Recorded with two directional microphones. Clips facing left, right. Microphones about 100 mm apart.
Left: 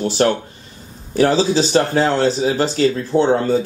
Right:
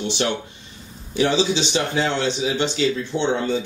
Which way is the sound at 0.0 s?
40° left (ahead or behind).